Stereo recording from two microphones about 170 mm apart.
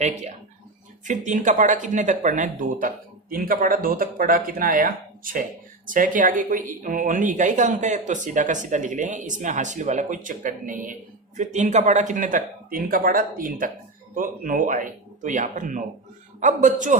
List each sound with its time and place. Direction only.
0.0 s speech: 40° right (ahead or behind)